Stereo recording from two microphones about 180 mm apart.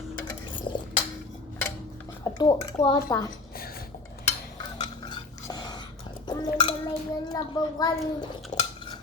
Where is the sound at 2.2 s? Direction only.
20° left (ahead or behind).